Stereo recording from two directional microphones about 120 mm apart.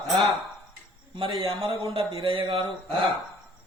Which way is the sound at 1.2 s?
45° right (ahead or behind).